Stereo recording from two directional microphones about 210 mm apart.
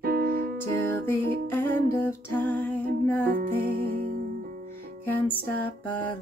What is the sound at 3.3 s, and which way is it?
Music, 45° right (ahead or behind).